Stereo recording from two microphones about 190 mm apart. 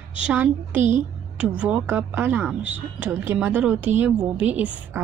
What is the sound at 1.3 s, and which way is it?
Speech, 5° right (ahead or behind).